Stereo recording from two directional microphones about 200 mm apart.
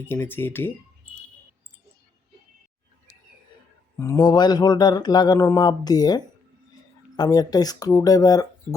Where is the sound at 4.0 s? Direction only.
15° left (ahead or behind).